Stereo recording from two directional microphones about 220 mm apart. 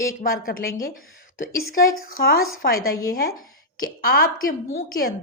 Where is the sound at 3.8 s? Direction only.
40° left (ahead or behind).